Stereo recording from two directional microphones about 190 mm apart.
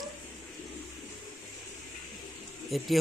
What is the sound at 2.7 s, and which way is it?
Speech, centre (ahead or behind).